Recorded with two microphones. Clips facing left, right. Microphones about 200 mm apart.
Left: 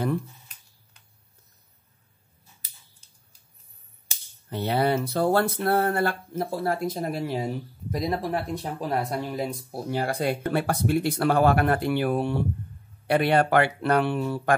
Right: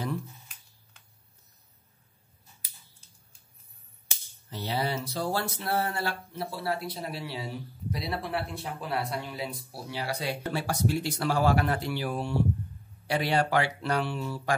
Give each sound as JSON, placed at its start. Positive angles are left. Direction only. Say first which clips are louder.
{"t": 4.5, "sound": "speech", "louder": "left 7 dB", "side_deg": 55}